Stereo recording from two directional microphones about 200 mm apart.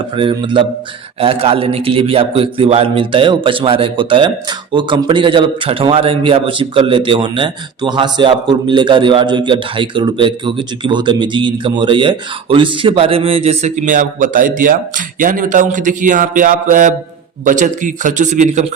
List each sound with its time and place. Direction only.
0.1 s a man's voice: 25° right (ahead or behind)